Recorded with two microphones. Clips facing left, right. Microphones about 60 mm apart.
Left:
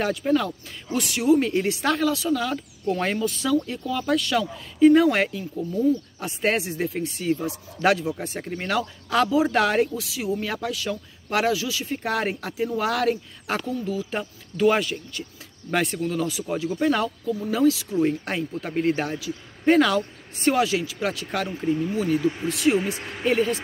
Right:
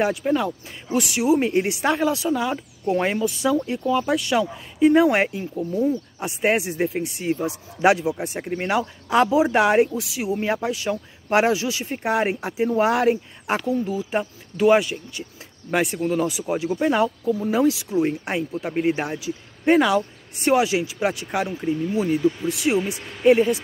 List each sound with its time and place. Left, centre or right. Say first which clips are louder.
0.0 s a woman's voice: right 1 dB; centre
22.8 s speech: right 1 dB; left
23.2 s a woman's voice: right 6 dB; centre